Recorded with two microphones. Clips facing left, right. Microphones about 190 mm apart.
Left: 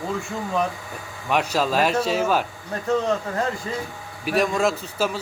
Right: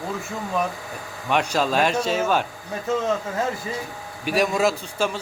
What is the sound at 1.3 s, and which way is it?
Speech, centre (ahead or behind).